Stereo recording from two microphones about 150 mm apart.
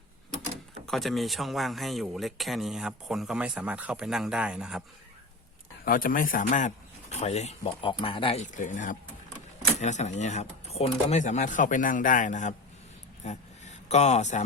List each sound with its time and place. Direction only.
0.9 s speech: centre (ahead or behind)
5.8 s speech: 70° left (ahead or behind); by 8.4 s 40° left (ahead or behind)
8.5 s speech: 60° left (ahead or behind)
13.2 s a sound: 45° left (ahead or behind)